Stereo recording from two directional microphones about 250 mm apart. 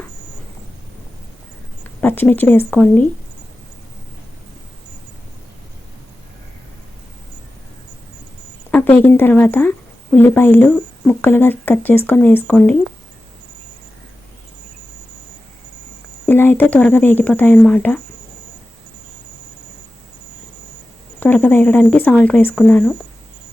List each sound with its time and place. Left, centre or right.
2.0 s speech: centre
8.7 s a sound: centre
9.0 s speech: centre
16.2 s speech: centre
21.2 s speech: centre